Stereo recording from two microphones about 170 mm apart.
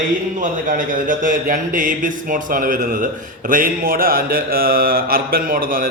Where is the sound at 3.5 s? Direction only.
55° right (ahead or behind).